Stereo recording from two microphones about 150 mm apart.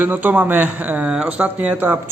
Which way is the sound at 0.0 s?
10° right (ahead or behind).